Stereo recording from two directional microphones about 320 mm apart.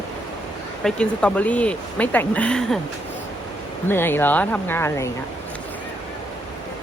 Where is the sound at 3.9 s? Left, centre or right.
Centre.